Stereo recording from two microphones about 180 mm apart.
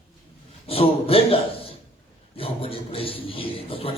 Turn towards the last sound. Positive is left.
turn(degrees=30)  # may be behind; listen again after turning